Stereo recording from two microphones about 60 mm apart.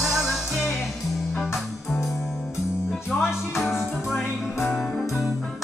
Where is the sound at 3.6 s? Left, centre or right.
Centre.